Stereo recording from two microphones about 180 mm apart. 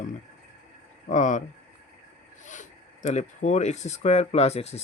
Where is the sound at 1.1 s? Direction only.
45° left (ahead or behind).